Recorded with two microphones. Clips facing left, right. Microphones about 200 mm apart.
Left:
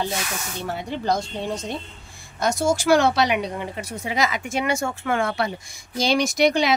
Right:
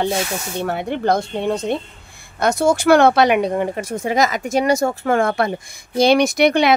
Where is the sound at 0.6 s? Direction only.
60° right (ahead or behind).